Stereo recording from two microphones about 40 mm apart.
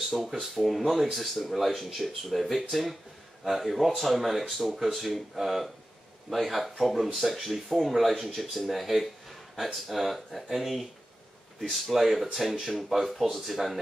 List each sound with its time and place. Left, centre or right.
0.1 s speech: centre